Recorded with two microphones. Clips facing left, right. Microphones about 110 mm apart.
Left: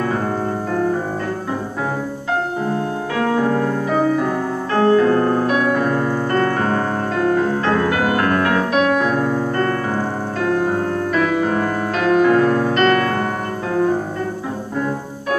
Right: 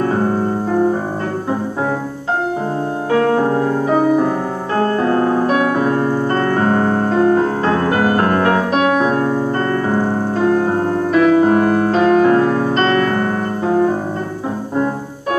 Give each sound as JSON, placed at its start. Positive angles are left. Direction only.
{"t": 3.1, "sound": "music", "side_deg": -35}